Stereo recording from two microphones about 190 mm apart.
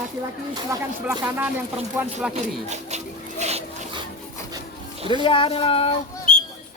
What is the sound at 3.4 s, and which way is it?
Dog, 35° right (ahead or behind).